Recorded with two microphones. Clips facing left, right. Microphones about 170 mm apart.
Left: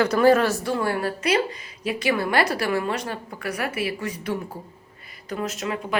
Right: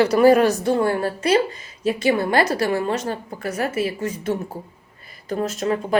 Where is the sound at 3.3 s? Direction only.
25° right (ahead or behind).